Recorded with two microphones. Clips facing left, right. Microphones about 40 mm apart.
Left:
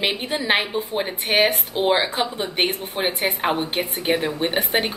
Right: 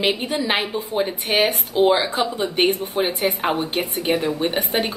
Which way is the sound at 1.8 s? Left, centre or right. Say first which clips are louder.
Right 3 dB; left.